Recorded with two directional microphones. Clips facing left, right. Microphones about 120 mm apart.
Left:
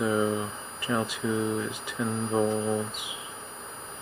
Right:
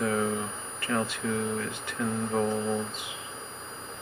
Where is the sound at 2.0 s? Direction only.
10° left (ahead or behind).